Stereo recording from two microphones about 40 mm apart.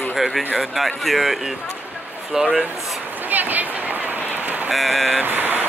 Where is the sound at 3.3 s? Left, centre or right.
Right.